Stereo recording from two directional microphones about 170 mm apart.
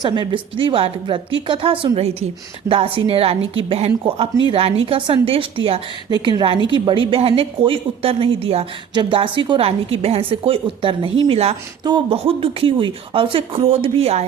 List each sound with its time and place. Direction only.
0.0 s a woman's voice: 25° right (ahead or behind)